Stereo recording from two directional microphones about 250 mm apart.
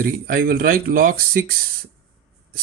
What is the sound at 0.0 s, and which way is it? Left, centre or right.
Speech, right.